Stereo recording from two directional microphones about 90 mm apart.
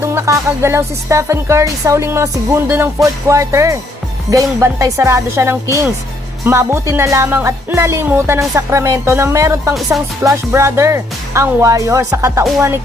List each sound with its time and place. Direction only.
0.0 s speech: 30° right (ahead or behind)
8.0 s music: 25° right (ahead or behind)
8.4 s speech: 35° right (ahead or behind)